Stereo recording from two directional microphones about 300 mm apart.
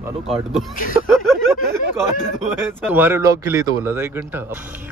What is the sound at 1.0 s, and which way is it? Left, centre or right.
Speech, centre.